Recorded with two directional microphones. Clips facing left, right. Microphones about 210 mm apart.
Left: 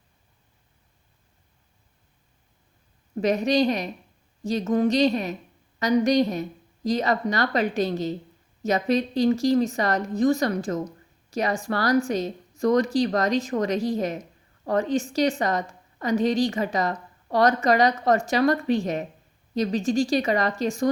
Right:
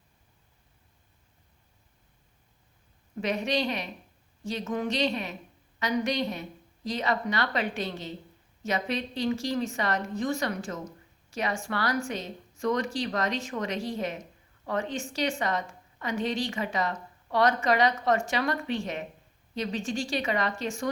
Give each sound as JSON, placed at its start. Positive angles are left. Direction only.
{"t": 3.2, "sound": "a woman's voice", "side_deg": 40}